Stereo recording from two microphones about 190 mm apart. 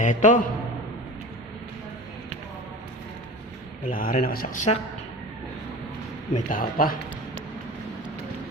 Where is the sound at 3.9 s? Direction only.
50° left (ahead or behind).